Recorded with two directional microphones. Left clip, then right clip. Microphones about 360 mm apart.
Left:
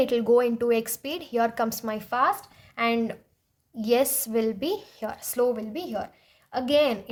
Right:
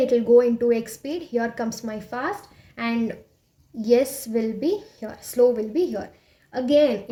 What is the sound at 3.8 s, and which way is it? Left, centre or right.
A woman's voice, left.